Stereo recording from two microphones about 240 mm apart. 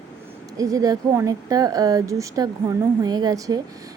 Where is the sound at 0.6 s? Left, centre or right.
Centre.